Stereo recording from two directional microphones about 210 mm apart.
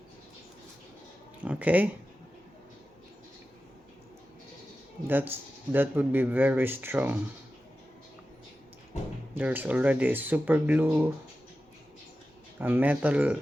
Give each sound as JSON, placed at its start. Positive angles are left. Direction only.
{"t": 1.4, "sound": "a sound", "side_deg": -5}
{"t": 5.0, "sound": "speech", "side_deg": -10}
{"t": 9.3, "sound": "speech", "side_deg": -10}
{"t": 12.5, "sound": "speech", "side_deg": -10}